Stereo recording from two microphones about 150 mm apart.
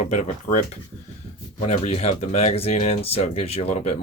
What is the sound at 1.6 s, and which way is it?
Speech, 45° left (ahead or behind).